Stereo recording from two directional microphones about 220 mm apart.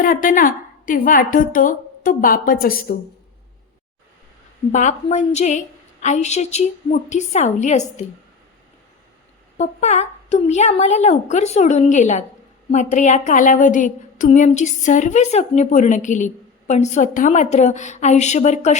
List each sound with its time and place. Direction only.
0.0 s a woman's voice: 40° left (ahead or behind)
4.7 s a woman's voice: 35° left (ahead or behind)
9.6 s a woman's voice: 30° left (ahead or behind)